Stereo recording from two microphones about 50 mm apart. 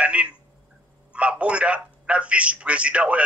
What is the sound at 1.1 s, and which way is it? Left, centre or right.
A man's voice, right.